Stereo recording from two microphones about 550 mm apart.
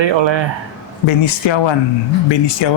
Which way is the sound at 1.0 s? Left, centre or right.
Left.